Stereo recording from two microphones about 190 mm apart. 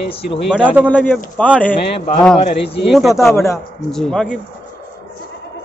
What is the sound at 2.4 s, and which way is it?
Speech, 35° left (ahead or behind).